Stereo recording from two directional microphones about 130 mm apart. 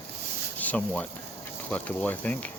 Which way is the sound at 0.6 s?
10° left (ahead or behind).